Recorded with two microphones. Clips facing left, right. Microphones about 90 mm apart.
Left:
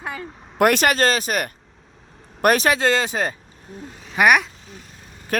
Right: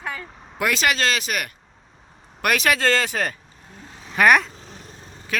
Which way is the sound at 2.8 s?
20° left (ahead or behind).